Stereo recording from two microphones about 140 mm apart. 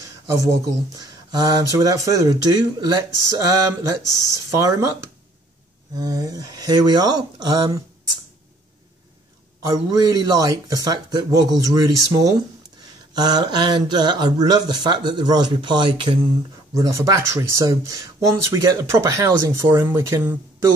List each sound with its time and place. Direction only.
0.0 s a sound: 25° right (ahead or behind)
0.9 s speech: 30° right (ahead or behind)
5.9 s speech: 25° right (ahead or behind)
9.7 s speech: 25° right (ahead or behind)
16.7 s speech: 25° right (ahead or behind)